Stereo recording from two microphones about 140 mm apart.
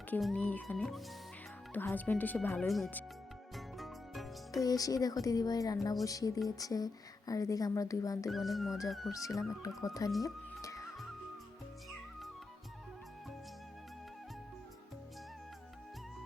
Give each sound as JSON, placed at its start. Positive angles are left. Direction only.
{"t": 0.3, "sound": "speech", "side_deg": 10}
{"t": 2.6, "sound": "speech", "side_deg": 0}
{"t": 3.5, "sound": "music", "side_deg": 0}
{"t": 4.6, "sound": "speech", "side_deg": 25}
{"t": 8.3, "sound": "speech", "side_deg": 0}
{"t": 9.1, "sound": "speech", "side_deg": 25}
{"t": 10.2, "sound": "music", "side_deg": 25}